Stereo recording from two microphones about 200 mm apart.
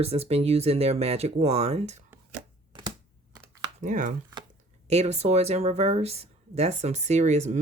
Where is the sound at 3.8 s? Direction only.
40° right (ahead or behind).